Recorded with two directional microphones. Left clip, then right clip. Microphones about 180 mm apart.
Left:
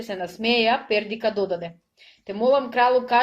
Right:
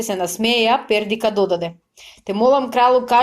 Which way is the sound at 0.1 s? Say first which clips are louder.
Right 4 dB; 30° right (ahead or behind).